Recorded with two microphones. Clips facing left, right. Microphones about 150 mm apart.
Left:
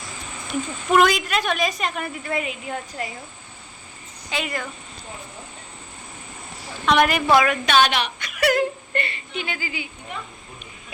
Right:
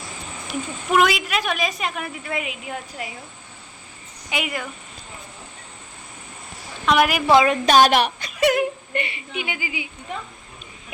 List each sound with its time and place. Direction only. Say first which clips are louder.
0.4 s a woman's voice: left 2 dB; centre (ahead or behind)
4.3 s speech: right 1 dB; 10° right (ahead or behind)
6.8 s a woman's voice: even; 5° right (ahead or behind)
7.3 s a woman's voice: right 4 dB; 30° right (ahead or behind); by 8.1 s 45° right (ahead or behind)
8.4 s whimper: right 1 dB; 20° right (ahead or behind)